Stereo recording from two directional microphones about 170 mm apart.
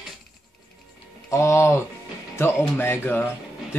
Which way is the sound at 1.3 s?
15° left (ahead or behind).